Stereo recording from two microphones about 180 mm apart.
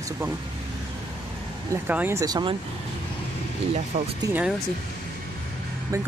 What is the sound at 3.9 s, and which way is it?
Speech, 40° right (ahead or behind).